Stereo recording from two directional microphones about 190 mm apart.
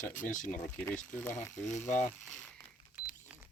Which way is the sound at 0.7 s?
10° left (ahead or behind).